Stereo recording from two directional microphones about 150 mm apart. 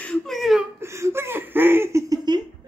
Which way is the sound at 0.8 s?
20° right (ahead or behind).